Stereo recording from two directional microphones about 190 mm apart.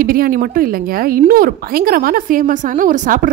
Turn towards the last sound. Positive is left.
turn(degrees=-45)  # may be behind; listen again after turning